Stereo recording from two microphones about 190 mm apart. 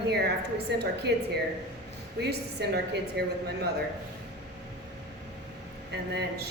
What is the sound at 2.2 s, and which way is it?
A woman's voice, 60° right (ahead or behind).